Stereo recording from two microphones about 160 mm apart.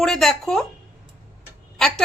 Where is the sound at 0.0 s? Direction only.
Centre (ahead or behind).